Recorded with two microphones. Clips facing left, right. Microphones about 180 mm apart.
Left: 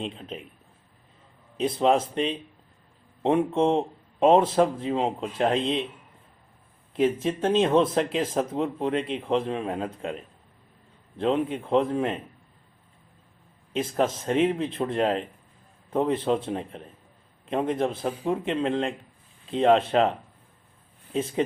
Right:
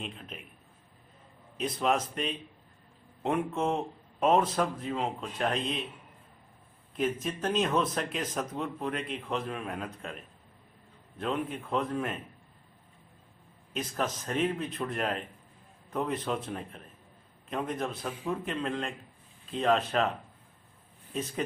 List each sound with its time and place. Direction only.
0.0 s a man's voice: 30° left (ahead or behind)
1.5 s speech: 30° left (ahead or behind)
7.0 s speech: 30° left (ahead or behind)
11.5 s speech: 30° left (ahead or behind)
13.7 s speech: 25° left (ahead or behind)